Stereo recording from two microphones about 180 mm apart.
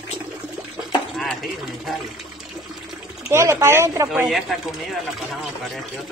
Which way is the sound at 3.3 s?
15° right (ahead or behind).